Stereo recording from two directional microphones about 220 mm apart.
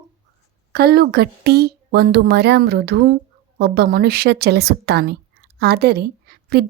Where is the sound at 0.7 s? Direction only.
45° right (ahead or behind).